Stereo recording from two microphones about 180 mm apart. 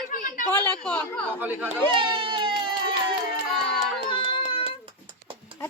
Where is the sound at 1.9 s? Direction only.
25° right (ahead or behind).